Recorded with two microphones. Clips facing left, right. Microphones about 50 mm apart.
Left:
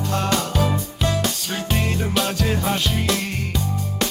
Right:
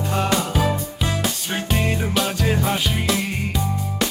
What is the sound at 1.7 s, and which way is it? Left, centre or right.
Music, centre.